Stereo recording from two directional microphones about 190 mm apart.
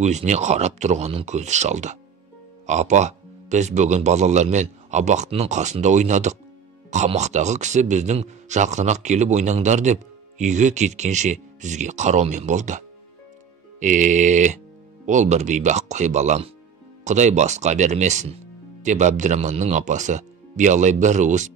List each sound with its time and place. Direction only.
0.0 s speech: 35° right (ahead or behind)